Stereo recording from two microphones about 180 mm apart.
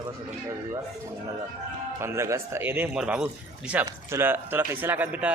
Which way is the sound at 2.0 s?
15° right (ahead or behind).